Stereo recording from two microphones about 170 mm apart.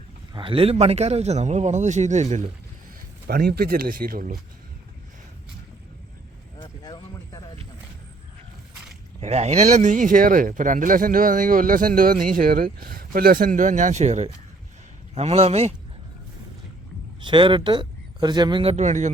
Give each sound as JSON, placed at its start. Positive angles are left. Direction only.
{"t": 0.3, "sound": "speech", "side_deg": -30}
{"t": 3.2, "sound": "speech", "side_deg": -65}
{"t": 6.6, "sound": "a sound", "side_deg": 25}
{"t": 9.2, "sound": "speech", "side_deg": -40}
{"t": 17.2, "sound": "speech", "side_deg": -30}